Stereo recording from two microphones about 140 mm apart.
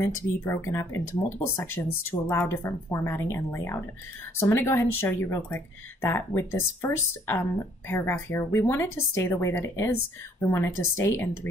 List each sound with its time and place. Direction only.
0.0 s a woman's voice: 20° left (ahead or behind)